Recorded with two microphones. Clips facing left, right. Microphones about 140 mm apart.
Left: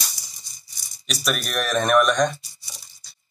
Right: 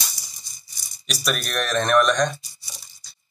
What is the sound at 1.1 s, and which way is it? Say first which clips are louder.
Speech: even; centre (ahead or behind).